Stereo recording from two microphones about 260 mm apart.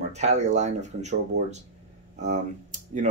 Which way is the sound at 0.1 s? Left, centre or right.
Right.